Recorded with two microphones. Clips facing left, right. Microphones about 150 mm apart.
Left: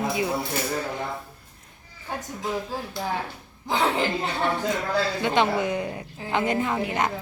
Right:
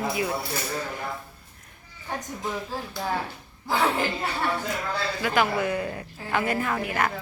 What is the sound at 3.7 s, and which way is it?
A woman's voice, 20° left (ahead or behind).